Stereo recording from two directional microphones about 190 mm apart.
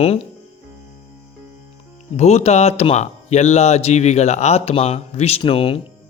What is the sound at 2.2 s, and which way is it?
Speech, 35° left (ahead or behind).